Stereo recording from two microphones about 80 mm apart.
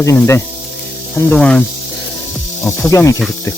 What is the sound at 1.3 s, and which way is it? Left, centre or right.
Snake, centre.